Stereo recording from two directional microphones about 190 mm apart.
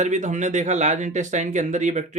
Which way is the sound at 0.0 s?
40° right (ahead or behind).